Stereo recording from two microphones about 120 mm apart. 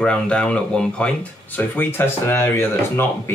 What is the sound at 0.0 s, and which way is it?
Speech, 10° left (ahead or behind).